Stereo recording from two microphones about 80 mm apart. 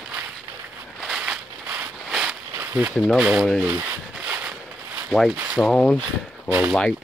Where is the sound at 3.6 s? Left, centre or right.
Right.